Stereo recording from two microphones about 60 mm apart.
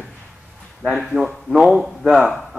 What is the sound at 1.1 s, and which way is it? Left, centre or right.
A man's voice, centre.